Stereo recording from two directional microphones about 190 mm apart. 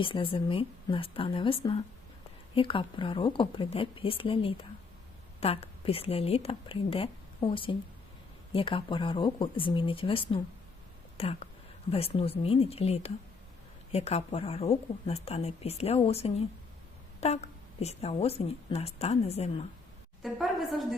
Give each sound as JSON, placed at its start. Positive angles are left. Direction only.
{"t": 0.0, "sound": "a woman's voice", "side_deg": 30}
{"t": 20.2, "sound": "a woman's voice", "side_deg": 0}